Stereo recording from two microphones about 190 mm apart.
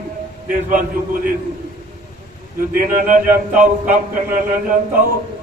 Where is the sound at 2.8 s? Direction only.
50° right (ahead or behind).